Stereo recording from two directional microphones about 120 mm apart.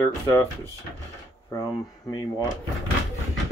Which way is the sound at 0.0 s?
25° left (ahead or behind).